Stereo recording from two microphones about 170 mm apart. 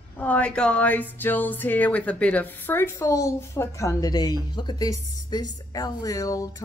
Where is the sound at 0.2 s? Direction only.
10° left (ahead or behind).